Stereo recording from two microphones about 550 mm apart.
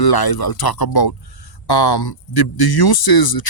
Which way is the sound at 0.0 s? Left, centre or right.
Left.